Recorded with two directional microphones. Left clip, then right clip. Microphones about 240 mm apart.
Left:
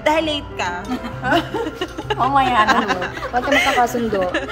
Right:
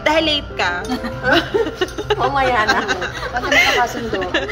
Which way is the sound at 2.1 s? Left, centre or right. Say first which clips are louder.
Left 1 dB; left.